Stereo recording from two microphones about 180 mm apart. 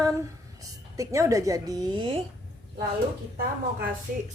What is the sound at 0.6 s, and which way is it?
A woman's voice, 20° right (ahead or behind).